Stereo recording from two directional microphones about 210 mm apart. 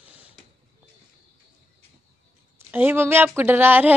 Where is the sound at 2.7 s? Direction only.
10° right (ahead or behind).